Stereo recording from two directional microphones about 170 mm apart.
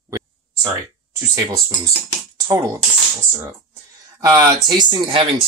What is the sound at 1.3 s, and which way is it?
Speech, 20° right (ahead or behind).